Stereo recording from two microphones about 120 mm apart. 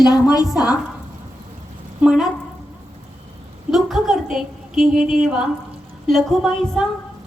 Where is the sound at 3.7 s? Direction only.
Centre (ahead or behind).